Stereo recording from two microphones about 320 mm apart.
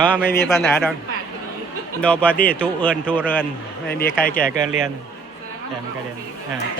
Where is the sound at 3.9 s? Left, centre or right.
Left.